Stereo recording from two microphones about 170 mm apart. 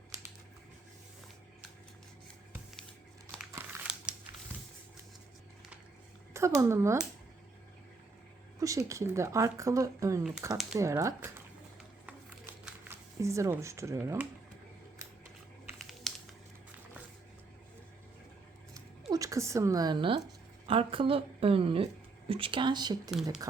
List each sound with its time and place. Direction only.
3.5 s crumpling: 5° right (ahead or behind)
6.3 s speech: 15° right (ahead or behind)
8.5 s a sound: 20° right (ahead or behind)
8.9 s speech: 15° right (ahead or behind)
12.9 s speech: 15° right (ahead or behind)
15.8 s typing: centre (ahead or behind)
19.1 s a woman's voice: 20° right (ahead or behind)